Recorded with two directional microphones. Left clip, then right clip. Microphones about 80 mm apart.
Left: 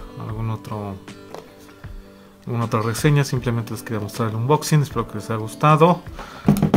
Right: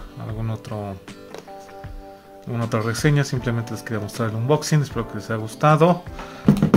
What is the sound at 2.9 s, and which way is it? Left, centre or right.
Speech, left.